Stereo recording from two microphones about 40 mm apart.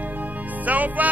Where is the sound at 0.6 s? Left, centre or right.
Right.